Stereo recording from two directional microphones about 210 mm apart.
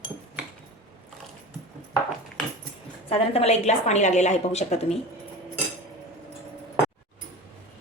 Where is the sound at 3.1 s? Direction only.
30° left (ahead or behind).